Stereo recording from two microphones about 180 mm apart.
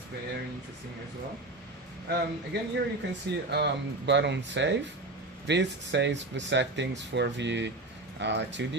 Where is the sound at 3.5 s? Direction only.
70° right (ahead or behind).